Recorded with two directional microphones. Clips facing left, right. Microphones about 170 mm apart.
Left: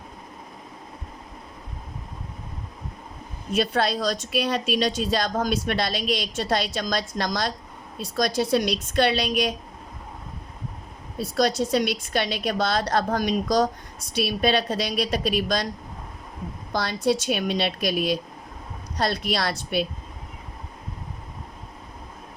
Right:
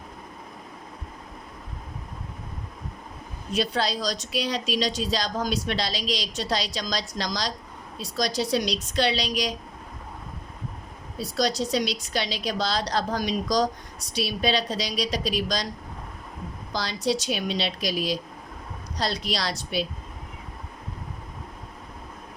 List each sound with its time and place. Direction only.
3.5 s a woman's voice: 55° left (ahead or behind)
11.2 s a woman's voice: 55° left (ahead or behind)
16.7 s a woman's voice: 55° left (ahead or behind)